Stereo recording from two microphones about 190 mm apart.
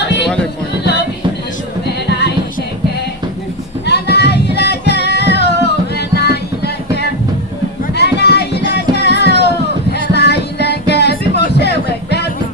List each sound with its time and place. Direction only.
2.0 s music: 65° left (ahead or behind)
3.8 s music: 60° left (ahead or behind)